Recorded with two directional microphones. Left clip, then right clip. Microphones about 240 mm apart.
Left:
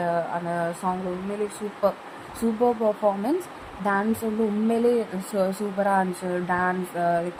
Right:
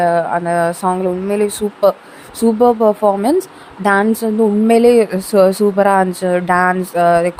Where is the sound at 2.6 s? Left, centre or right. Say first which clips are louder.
Right 10 dB; right.